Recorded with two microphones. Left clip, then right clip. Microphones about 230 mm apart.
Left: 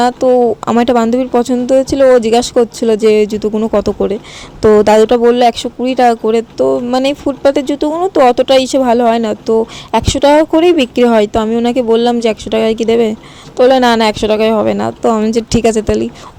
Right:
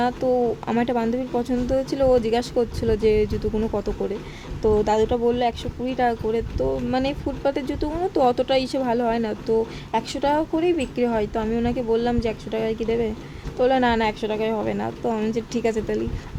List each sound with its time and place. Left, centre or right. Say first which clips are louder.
0.0 s speech: left 12 dB; left